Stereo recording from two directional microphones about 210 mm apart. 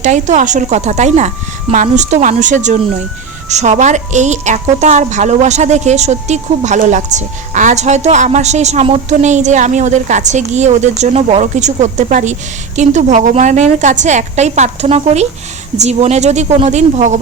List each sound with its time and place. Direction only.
0.0 s a woman's voice: 35° right (ahead or behind)